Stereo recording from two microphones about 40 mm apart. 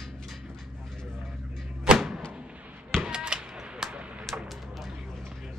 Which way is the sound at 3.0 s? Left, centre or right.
Right.